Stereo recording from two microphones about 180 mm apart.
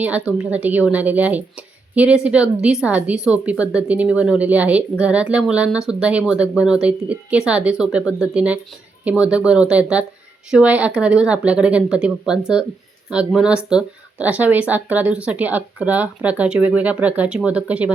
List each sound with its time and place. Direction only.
0.0 s a woman's voice: 5° right (ahead or behind)